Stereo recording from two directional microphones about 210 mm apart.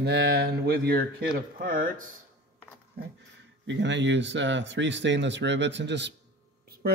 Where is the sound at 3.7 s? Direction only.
60° right (ahead or behind).